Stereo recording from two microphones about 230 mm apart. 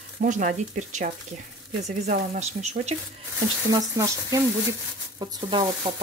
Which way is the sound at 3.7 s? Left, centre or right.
Centre.